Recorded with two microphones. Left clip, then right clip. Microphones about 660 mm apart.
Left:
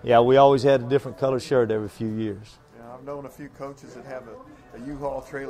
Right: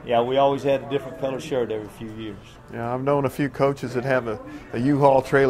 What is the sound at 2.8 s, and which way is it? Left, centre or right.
Speech, right.